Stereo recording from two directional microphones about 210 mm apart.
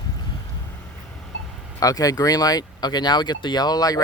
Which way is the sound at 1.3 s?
60° left (ahead or behind).